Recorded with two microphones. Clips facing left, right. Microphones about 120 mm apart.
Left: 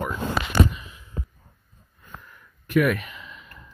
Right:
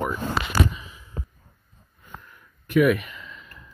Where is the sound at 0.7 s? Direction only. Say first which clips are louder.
Even; centre (ahead or behind).